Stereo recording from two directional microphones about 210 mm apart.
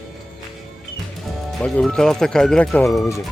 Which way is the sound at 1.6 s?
5° left (ahead or behind).